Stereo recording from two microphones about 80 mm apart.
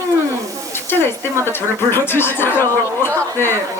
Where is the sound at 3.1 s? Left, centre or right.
Right.